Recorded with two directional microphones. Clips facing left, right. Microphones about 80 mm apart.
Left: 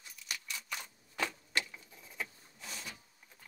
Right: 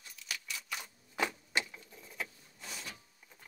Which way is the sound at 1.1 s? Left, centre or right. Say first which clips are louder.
Right 2 dB; centre.